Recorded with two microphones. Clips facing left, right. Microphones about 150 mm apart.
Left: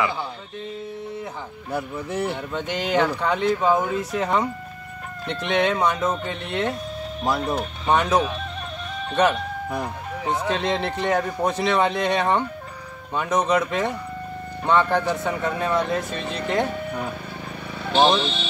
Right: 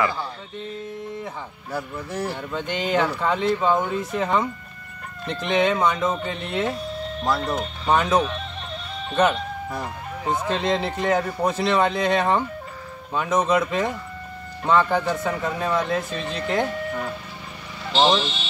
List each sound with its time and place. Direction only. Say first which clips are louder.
2.0 s speech: left 3 dB; 20° left (ahead or behind)
2.3 s speech: even; centre (ahead or behind)